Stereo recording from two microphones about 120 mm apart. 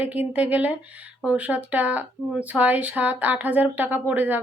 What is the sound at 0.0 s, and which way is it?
Speech, 10° right (ahead or behind).